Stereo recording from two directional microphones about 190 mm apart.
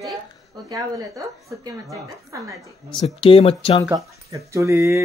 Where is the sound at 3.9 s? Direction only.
15° right (ahead or behind).